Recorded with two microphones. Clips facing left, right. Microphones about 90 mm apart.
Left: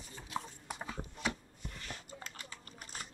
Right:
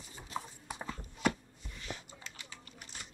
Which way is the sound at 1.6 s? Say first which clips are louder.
Right 3 dB; 50° left (ahead or behind).